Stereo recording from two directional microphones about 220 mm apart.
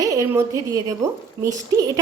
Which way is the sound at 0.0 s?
15° right (ahead or behind).